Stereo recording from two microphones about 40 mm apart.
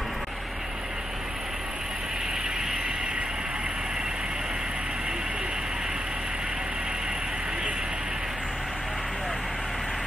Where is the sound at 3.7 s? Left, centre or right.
Centre.